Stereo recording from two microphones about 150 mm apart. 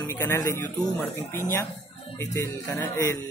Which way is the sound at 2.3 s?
20° left (ahead or behind).